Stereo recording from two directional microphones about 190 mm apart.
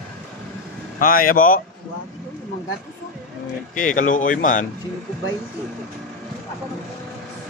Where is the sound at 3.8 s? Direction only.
45° left (ahead or behind).